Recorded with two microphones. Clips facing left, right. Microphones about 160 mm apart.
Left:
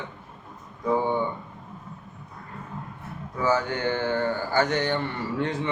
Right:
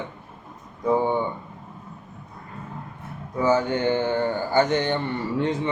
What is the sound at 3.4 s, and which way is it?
A man's voice, 20° right (ahead or behind).